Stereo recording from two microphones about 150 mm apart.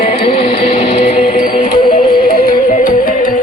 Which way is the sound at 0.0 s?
35° left (ahead or behind).